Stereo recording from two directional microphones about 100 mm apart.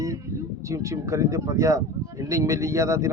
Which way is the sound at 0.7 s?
30° right (ahead or behind).